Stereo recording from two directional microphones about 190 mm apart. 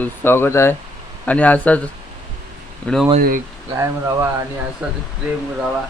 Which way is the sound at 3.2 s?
50° right (ahead or behind).